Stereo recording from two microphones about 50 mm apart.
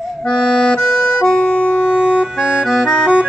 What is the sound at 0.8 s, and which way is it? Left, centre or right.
Accordion, centre.